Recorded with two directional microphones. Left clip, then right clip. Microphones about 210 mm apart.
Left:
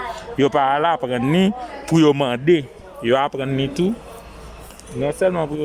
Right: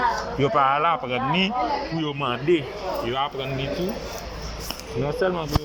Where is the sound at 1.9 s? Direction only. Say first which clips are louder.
Left 13 dB; 85° left.